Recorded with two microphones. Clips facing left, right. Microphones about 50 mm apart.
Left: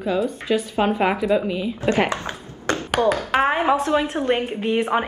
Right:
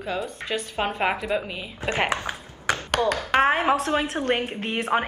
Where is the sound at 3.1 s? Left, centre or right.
Centre.